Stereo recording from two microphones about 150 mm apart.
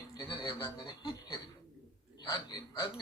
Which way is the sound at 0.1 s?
35° left (ahead or behind).